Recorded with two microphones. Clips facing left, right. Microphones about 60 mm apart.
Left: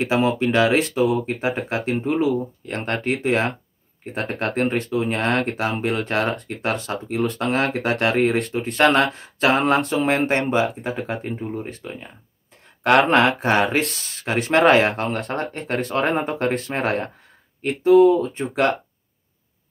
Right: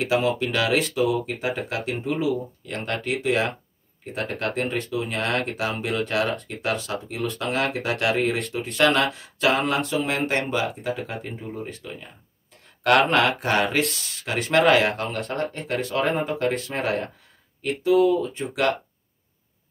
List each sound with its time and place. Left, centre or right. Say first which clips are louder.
0.0 s speech: left 3 dB; left
6.6 s speech: left 2 dB; left
7.7 s speech: left 3 dB; left
8.2 s speech: left 5 dB; left
8.7 s speech: left 3 dB; left
13.1 s speech: left 4 dB; left